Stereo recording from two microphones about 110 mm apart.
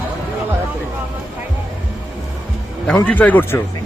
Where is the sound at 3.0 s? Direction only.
15° left (ahead or behind).